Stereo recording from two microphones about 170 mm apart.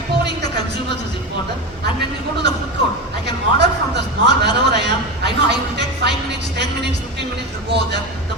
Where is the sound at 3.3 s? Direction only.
80° right.